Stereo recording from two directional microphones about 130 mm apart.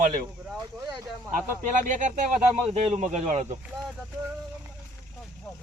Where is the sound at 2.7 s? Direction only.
55° right (ahead or behind).